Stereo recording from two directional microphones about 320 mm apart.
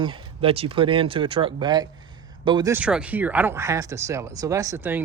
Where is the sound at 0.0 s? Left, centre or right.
Centre.